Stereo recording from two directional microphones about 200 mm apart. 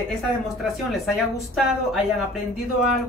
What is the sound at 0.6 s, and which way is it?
Speech, centre (ahead or behind).